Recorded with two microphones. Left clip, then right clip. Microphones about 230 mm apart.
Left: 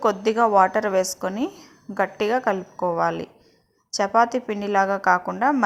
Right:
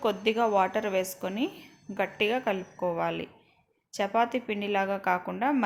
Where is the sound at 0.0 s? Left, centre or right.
Centre.